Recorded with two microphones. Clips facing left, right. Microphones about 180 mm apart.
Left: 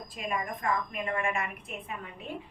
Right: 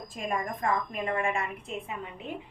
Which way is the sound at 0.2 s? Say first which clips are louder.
Right 2 dB; 40° right (ahead or behind).